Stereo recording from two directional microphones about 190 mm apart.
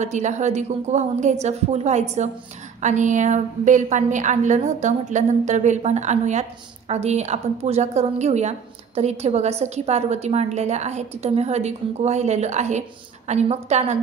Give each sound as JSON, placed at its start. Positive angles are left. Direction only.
{"t": 0.0, "sound": "a woman's voice", "side_deg": -40}